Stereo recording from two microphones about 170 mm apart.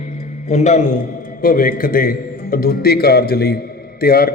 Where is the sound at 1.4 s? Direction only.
55° left (ahead or behind).